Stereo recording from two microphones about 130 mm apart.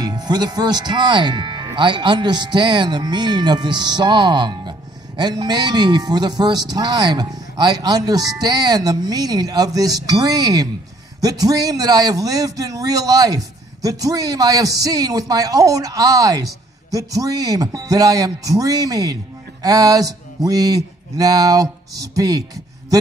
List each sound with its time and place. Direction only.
0.0 s speech: 30° right (ahead or behind)
19.6 s a sound: 30° right (ahead or behind)
22.1 s speech: 30° right (ahead or behind)